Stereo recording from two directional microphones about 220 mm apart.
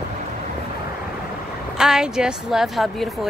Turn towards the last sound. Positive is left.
turn(degrees=0)  # may be behind; listen again after turning